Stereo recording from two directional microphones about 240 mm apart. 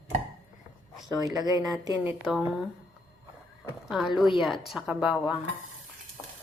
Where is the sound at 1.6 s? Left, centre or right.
Centre.